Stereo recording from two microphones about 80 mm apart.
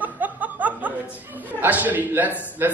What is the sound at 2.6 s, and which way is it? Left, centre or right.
Speech, right.